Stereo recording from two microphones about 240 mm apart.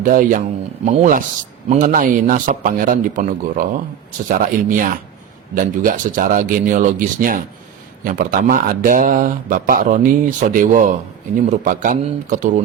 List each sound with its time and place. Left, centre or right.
0.0 s speech: right